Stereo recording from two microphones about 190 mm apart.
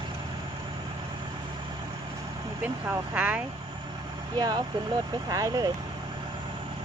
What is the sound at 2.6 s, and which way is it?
Speech, 10° right (ahead or behind).